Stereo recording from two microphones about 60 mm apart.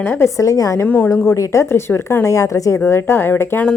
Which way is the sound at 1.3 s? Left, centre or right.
Left.